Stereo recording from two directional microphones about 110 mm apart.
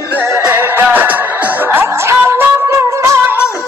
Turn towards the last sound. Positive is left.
turn(degrees=-25)  # may be behind; listen again after turning